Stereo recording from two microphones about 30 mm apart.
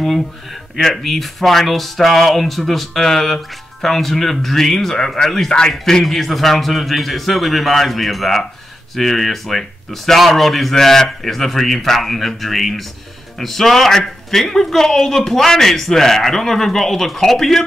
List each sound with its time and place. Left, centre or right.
0.0 s a man's voice: centre
6.0 s a man's voice: centre